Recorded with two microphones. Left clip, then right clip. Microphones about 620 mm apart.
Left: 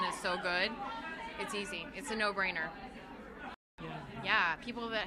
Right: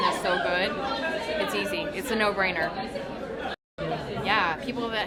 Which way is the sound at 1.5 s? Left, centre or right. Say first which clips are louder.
Right 12 dB; left.